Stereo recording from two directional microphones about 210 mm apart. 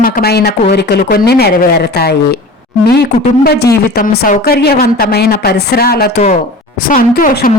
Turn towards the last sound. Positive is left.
turn(degrees=40)  # may be behind; listen again after turning